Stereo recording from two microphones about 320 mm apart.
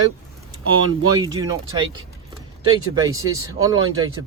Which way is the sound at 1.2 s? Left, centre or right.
Centre.